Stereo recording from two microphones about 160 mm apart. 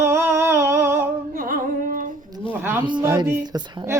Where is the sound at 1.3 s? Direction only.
60° right (ahead or behind).